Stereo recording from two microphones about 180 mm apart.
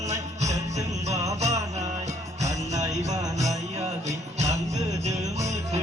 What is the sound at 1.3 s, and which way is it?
Mantra, 40° right (ahead or behind).